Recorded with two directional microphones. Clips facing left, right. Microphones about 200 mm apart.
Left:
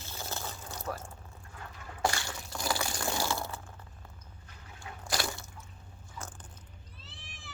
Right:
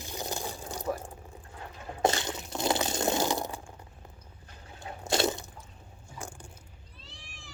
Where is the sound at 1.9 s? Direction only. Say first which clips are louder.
Right 5 dB; 20° right (ahead or behind).